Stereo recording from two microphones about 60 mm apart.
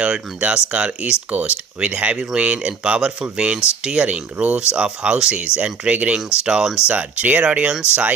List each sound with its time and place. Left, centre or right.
0.0 s speech: centre
6.9 s speech: right